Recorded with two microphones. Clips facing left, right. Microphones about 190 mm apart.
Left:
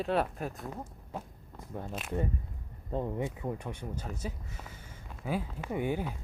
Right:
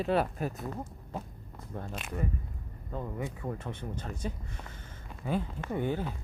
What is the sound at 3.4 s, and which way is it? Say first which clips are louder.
Speech: even; 10° left (ahead or behind).